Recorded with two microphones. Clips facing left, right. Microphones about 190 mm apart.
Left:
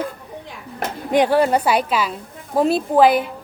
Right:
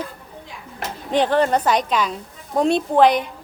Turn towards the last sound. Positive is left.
turn(degrees=5)  # may be behind; listen again after turning